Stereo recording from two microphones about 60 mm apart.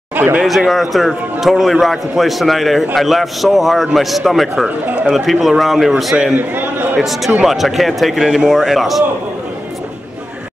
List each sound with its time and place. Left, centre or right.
0.1 s a sound: right
0.4 s a man's voice: centre
4.6 s speech: right
5.1 s a man's voice: centre
6.3 s a man's voice: right
7.0 s a man's voice: centre